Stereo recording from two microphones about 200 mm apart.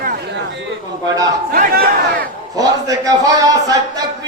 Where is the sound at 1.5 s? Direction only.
45° right (ahead or behind).